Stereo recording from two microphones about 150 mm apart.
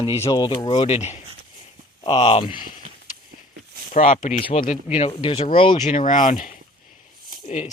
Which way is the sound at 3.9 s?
55° left (ahead or behind).